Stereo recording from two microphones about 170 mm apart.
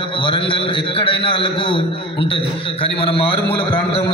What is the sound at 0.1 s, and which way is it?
A man's voice, 30° left (ahead or behind).